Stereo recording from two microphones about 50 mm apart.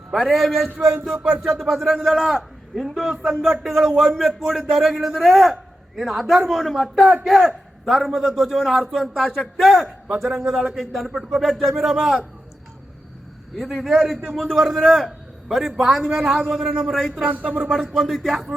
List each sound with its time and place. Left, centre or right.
0.1 s speech: centre
3.1 s a man's voice: centre
13.6 s a man's voice: centre
17.2 s speech: right
17.7 s speech: centre